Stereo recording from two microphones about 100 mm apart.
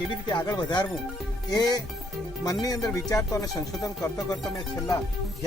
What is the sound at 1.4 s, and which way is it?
Speech, 45° left (ahead or behind).